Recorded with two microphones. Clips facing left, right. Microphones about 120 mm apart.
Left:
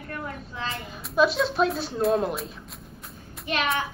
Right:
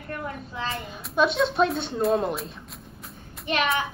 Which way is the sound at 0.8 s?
Centre (ahead or behind).